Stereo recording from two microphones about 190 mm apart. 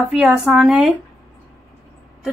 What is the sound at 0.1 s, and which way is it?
Speech, 5° right (ahead or behind).